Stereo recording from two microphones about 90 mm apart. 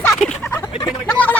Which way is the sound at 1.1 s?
15° left (ahead or behind).